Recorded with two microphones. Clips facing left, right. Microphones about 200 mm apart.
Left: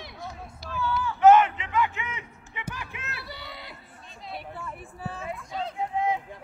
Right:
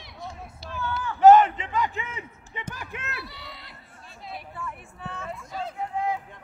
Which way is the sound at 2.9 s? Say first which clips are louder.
Right 2 dB; centre (ahead or behind).